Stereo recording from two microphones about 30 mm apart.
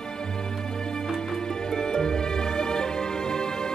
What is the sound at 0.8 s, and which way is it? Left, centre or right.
Music, left.